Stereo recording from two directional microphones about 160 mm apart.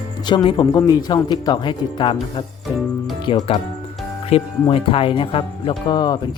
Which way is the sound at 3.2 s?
30° left (ahead or behind).